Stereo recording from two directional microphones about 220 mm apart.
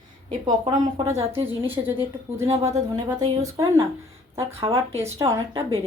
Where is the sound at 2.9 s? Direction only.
15° right (ahead or behind).